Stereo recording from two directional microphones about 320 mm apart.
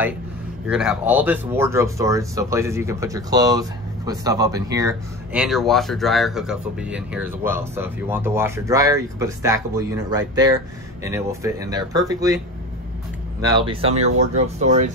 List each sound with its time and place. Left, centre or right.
0.7 s speech: centre
13.4 s speech: centre